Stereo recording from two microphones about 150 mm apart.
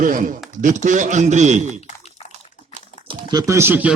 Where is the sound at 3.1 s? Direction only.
25° right (ahead or behind); by 3.9 s 10° right (ahead or behind).